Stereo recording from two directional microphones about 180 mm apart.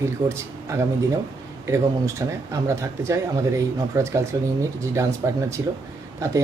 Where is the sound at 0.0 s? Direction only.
15° right (ahead or behind).